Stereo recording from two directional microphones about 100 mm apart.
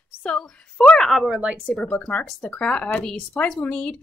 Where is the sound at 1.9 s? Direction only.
15° left (ahead or behind).